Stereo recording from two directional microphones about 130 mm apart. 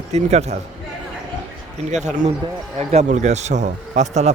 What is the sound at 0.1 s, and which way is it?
Speech, 60° right (ahead or behind).